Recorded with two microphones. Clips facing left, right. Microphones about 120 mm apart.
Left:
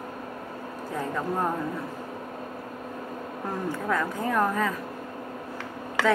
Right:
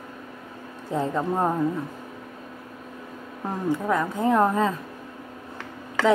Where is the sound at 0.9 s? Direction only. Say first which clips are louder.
Right 6 dB; 25° right (ahead or behind).